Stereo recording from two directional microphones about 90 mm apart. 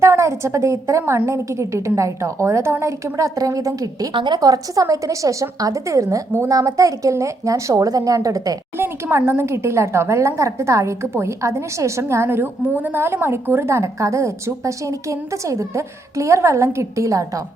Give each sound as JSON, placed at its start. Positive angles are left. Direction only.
{"t": 0.0, "sound": "speech", "side_deg": -35}
{"t": 4.1, "sound": "a woman's voice", "side_deg": -65}
{"t": 4.4, "sound": "speech", "side_deg": -40}
{"t": 8.8, "sound": "speech", "side_deg": -25}